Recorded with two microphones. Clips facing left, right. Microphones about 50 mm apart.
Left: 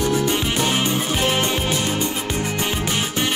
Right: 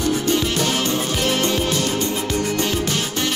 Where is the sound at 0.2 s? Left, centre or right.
Centre.